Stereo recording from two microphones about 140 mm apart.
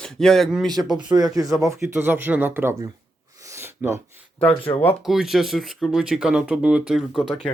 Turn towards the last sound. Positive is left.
turn(degrees=-5)  # may be behind; listen again after turning